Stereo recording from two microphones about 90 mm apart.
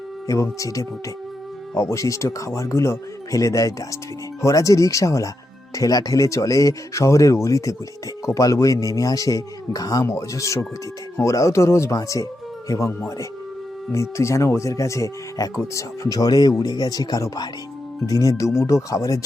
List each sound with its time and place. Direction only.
0.6 s speech: 40° left (ahead or behind)
10.0 s speech: 30° left (ahead or behind)
13.9 s speech: 30° left (ahead or behind)